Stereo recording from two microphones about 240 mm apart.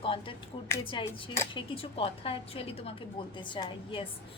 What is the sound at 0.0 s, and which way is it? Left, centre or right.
A woman's voice, left.